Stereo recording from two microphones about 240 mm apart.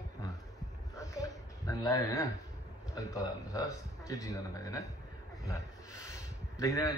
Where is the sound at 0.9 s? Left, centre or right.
Centre.